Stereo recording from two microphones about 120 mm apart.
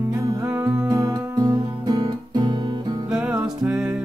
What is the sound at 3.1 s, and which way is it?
Music, 10° right (ahead or behind).